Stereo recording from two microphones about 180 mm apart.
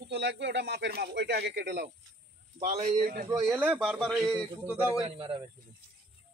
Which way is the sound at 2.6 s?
40° right (ahead or behind).